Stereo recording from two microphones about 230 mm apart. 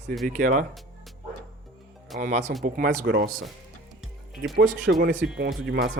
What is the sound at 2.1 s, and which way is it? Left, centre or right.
Speech, right.